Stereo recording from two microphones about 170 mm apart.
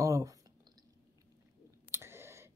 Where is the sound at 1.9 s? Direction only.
15° right (ahead or behind).